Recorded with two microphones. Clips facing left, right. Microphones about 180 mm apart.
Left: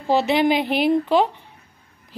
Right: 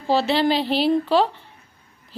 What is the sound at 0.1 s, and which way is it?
A woman's voice, 15° left (ahead or behind).